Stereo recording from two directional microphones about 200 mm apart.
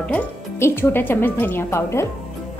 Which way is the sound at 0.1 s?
10° left (ahead or behind).